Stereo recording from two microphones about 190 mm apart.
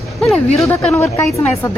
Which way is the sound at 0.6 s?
5° left (ahead or behind).